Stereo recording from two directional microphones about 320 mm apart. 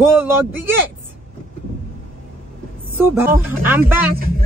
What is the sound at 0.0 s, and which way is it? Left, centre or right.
Speech, centre.